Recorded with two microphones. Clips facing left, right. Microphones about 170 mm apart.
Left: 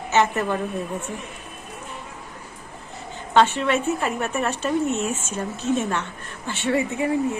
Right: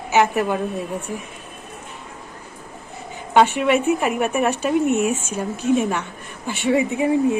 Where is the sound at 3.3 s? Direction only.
15° right (ahead or behind).